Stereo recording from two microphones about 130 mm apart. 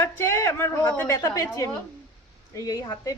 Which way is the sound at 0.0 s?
20° left (ahead or behind).